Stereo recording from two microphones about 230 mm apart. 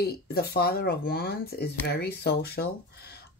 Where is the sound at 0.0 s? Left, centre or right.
Left.